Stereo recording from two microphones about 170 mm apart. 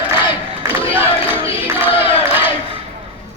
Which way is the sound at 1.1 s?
35° left (ahead or behind).